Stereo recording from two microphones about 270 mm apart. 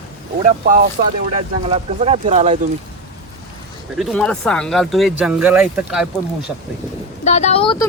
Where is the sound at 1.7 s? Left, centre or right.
Right.